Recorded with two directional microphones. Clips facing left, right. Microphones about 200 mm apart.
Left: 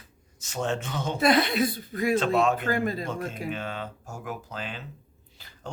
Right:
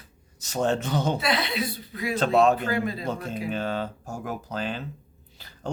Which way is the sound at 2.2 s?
35° right (ahead or behind).